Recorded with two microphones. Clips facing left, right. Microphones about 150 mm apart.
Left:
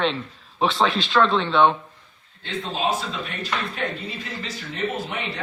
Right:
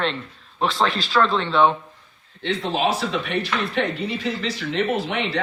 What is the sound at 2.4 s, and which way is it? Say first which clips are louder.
Speech: right 4 dB; 80° right.